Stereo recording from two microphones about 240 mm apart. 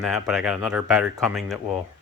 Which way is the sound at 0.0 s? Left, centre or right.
Centre.